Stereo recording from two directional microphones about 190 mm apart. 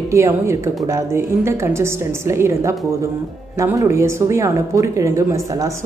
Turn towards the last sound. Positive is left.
turn(degrees=-15)  # may be behind; listen again after turning